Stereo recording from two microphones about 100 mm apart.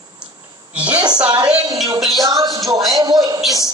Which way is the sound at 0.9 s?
45° right (ahead or behind).